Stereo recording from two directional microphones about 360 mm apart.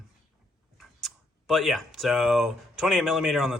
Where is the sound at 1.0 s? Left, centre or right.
Centre.